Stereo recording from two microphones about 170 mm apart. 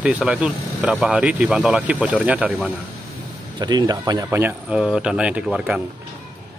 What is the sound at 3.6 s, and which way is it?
Speech, 25° right (ahead or behind).